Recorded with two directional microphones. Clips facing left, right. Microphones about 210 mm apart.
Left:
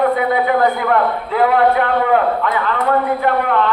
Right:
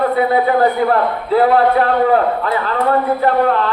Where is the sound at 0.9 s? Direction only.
35° right (ahead or behind).